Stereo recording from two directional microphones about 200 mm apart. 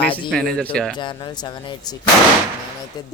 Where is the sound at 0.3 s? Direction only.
5° left (ahead or behind).